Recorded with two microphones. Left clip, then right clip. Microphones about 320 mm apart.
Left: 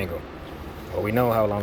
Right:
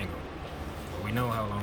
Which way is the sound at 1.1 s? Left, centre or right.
Centre.